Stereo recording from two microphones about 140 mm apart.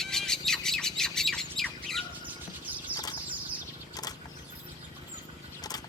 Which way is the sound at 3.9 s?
25° left (ahead or behind).